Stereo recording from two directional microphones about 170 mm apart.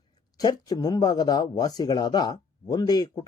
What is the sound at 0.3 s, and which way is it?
Speech, 20° left (ahead or behind).